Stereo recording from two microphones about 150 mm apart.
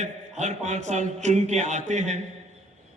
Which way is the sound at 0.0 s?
50° right (ahead or behind).